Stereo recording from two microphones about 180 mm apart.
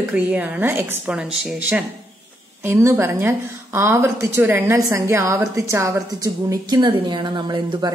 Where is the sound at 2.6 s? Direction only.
15° right (ahead or behind).